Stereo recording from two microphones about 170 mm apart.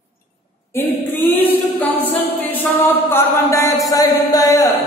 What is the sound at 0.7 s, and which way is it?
A capella, 10° left (ahead or behind).